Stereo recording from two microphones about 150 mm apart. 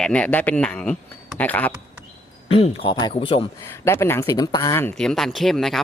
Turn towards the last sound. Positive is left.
turn(degrees=0)  # may be behind; listen again after turning